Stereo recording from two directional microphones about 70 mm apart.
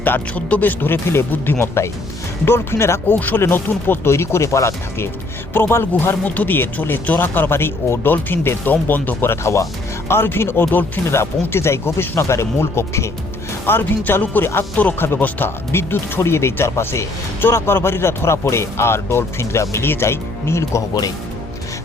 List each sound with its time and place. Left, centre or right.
0.0 s speech: left
3.2 s speech: left
6.2 s speech: left
11.2 s speech: left
13.7 s speech: left